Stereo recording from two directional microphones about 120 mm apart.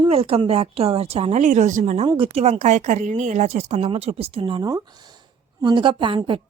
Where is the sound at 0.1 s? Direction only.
55° right (ahead or behind); by 2.0 s 85° right.